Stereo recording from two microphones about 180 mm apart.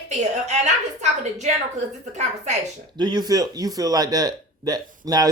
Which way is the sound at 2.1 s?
40° right (ahead or behind).